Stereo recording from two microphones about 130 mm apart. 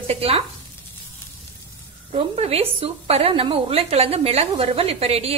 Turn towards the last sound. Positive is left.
turn(degrees=-50)  # may be behind; listen again after turning